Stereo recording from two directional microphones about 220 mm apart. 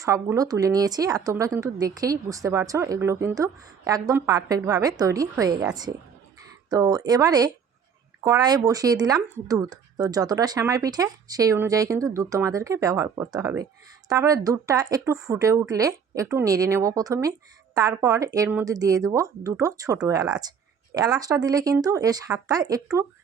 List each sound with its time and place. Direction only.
0.0 s speech: 15° right (ahead or behind)
6.7 s speech: 15° right (ahead or behind)